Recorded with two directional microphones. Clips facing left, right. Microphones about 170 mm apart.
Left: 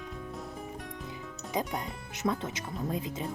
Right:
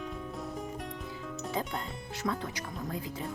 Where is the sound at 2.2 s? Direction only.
20° left (ahead or behind).